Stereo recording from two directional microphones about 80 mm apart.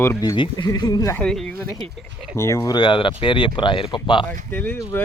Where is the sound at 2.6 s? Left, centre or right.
Left.